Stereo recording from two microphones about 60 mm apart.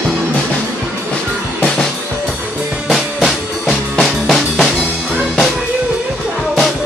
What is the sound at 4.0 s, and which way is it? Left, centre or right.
Music, centre.